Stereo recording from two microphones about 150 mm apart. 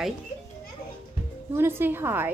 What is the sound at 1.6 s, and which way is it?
Speech, 15° right (ahead or behind).